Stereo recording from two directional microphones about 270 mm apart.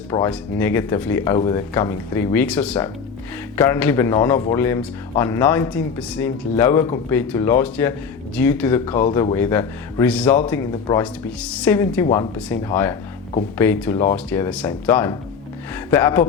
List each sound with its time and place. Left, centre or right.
0.1 s speech: centre
8.9 s speech: left
9.3 s a woman's voice: centre
12.0 s speech: centre
12.5 s speech: centre